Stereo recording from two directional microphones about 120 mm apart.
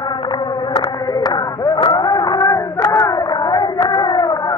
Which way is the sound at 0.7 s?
35° left (ahead or behind).